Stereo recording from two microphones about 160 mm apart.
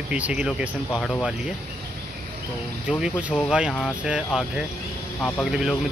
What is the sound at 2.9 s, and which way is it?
Speech, 5° right (ahead or behind).